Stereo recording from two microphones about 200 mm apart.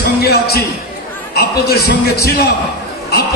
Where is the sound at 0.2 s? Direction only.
50° left (ahead or behind).